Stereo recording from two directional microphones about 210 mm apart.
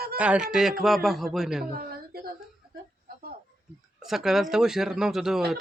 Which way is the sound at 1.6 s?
45° right (ahead or behind).